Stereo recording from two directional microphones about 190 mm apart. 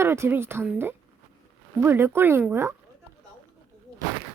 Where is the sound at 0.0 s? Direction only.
15° right (ahead or behind).